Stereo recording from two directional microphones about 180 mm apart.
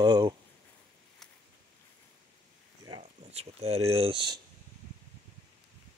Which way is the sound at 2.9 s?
30° right (ahead or behind).